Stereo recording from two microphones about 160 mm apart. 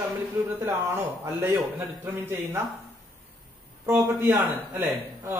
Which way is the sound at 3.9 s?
15° right (ahead or behind).